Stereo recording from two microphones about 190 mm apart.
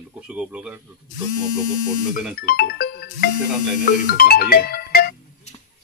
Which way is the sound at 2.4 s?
50° left (ahead or behind).